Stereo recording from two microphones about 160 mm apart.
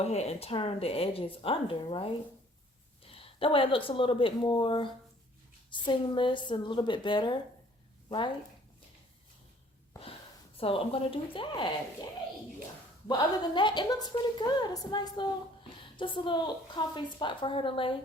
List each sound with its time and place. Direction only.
0.0 s a woman's voice: 45° left (ahead or behind)
10.6 s speech: 35° left (ahead or behind)
13.1 s a woman's voice: 30° left (ahead or behind)